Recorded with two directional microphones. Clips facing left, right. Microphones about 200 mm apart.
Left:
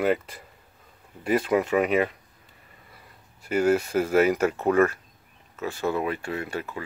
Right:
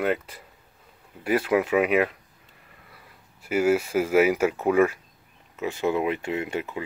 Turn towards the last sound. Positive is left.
turn(degrees=-20)  # may be behind; listen again after turning